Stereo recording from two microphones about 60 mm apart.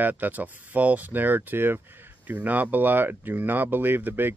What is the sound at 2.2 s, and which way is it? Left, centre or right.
Speech, right.